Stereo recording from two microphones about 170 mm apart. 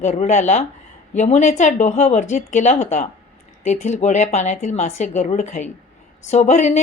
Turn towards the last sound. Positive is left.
turn(degrees=45)  # may be behind; listen again after turning